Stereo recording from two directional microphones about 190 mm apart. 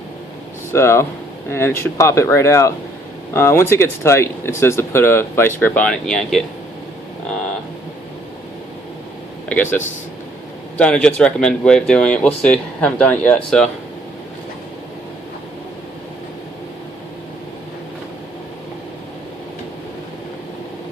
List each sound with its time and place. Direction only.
0.7 s speech: 15° left (ahead or behind)
9.5 s speech: 10° left (ahead or behind)
10.8 s speech: 5° left (ahead or behind)